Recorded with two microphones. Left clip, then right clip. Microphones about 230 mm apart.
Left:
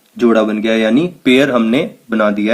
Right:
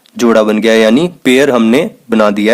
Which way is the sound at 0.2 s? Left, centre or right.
Right.